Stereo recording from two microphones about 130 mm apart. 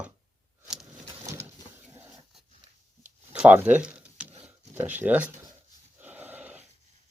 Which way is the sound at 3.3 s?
10° right (ahead or behind).